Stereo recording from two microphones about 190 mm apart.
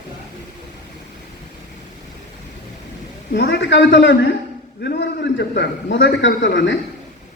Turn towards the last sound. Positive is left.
turn(degrees=70)  # may be behind; listen again after turning